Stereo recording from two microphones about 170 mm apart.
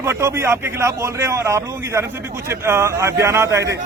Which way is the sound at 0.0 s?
15° right (ahead or behind).